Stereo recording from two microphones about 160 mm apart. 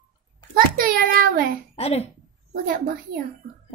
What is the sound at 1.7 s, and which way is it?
Speech, 40° left (ahead or behind).